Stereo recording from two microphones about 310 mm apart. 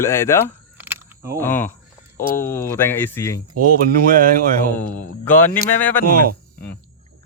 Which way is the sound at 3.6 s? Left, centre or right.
Right.